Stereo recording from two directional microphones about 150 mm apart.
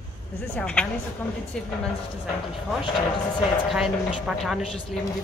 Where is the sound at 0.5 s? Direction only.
5° left (ahead or behind).